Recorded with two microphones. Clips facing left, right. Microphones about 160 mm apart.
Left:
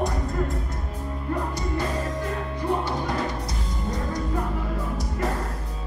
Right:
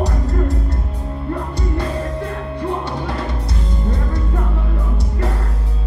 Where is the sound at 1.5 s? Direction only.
60° right (ahead or behind).